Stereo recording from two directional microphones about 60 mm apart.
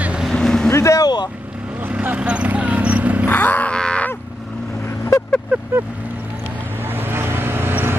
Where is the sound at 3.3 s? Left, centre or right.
Left.